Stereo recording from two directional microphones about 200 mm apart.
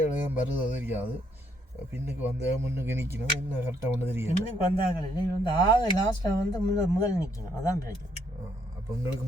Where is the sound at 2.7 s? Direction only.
10° right (ahead or behind).